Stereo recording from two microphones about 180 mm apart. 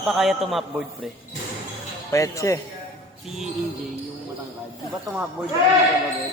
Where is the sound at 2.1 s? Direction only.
15° left (ahead or behind).